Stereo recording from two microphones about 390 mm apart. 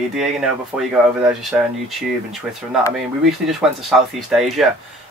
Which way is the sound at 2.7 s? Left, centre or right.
Centre.